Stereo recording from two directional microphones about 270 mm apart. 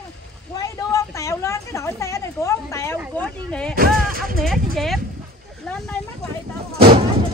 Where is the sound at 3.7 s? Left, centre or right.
Right.